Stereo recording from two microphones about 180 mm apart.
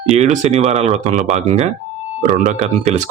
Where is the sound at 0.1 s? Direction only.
40° right (ahead or behind).